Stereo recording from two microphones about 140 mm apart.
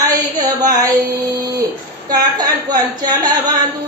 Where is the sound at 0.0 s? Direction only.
30° right (ahead or behind).